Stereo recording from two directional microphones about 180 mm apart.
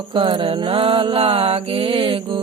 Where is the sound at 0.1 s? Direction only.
25° right (ahead or behind).